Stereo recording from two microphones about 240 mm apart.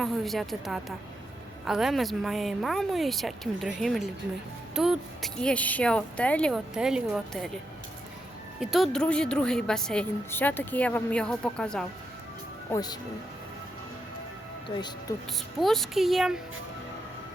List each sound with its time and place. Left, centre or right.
0.0 s a woman's voice: centre
8.6 s a woman's voice: centre
12.7 s speech: centre
15.6 s a woman's voice: centre